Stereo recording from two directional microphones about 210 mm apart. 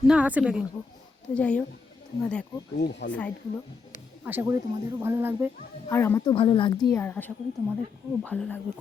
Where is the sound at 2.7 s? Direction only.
55° left (ahead or behind).